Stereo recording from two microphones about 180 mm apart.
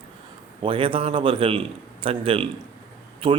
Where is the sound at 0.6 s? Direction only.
30° right (ahead or behind).